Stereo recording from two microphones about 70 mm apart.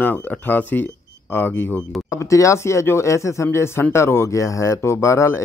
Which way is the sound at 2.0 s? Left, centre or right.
Left.